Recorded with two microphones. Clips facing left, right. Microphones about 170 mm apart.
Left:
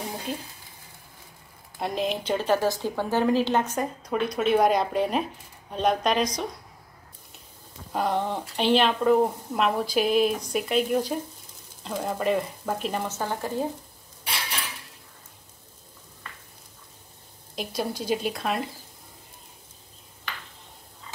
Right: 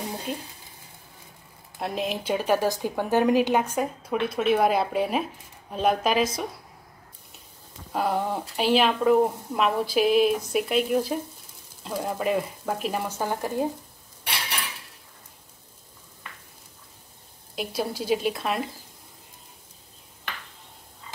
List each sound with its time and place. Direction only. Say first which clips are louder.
0.3 s speech: even; centre (ahead or behind)
1.8 s a woman's voice: left 1 dB; centre (ahead or behind)
7.9 s speech: even; 5° right (ahead or behind)
17.6 s speech: right 1 dB; 5° right (ahead or behind)